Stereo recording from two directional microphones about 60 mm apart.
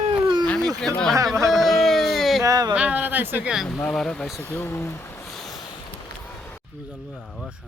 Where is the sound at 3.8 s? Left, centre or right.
Centre.